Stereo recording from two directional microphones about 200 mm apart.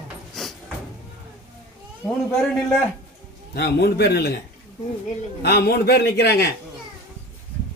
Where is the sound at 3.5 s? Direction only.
55° left (ahead or behind).